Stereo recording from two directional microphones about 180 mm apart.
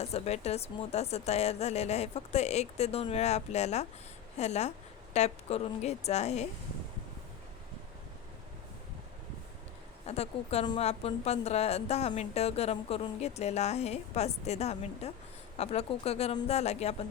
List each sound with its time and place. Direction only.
0.0 s a woman's voice: 35° left (ahead or behind)
10.1 s a woman's voice: 35° left (ahead or behind)